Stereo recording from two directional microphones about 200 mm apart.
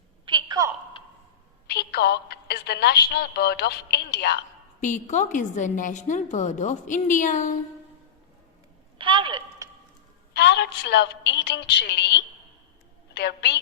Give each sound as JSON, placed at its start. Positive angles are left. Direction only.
{"t": 0.3, "sound": "a sound", "side_deg": -25}
{"t": 1.6, "sound": "a woman's voice", "side_deg": 50}
{"t": 4.8, "sound": "a woman's voice", "side_deg": 40}
{"t": 9.0, "sound": "a sound", "side_deg": -25}
{"t": 10.3, "sound": "a woman's voice", "side_deg": 55}
{"t": 13.1, "sound": "a woman's voice", "side_deg": 55}